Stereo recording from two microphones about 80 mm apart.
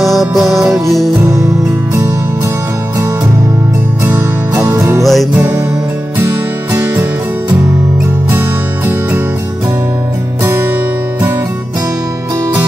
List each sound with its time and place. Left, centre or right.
0.0 s music: centre
1.2 s music: right
4.0 s music: right
5.0 s music: centre
5.3 s music: right
6.7 s music: right
10.4 s music: right